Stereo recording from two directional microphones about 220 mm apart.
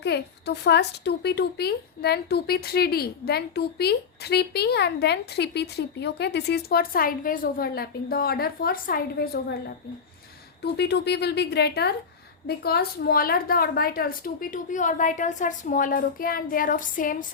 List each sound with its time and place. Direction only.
0.0 s a woman's voice: 50° left (ahead or behind)